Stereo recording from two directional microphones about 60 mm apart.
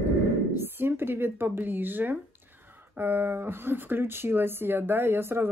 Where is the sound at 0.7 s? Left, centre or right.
Right.